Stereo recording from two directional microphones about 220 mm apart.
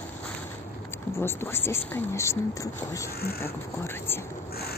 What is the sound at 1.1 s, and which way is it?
Speech, 10° left (ahead or behind).